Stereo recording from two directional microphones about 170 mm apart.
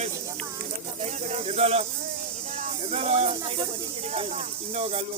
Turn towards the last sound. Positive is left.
turn(degrees=-35)  # may be behind; listen again after turning